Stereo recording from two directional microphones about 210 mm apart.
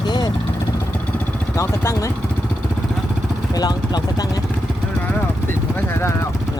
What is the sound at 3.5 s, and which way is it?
Speech, 20° left (ahead or behind).